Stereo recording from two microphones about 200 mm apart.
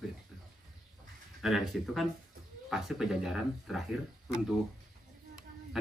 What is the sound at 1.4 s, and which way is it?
Speech, centre (ahead or behind).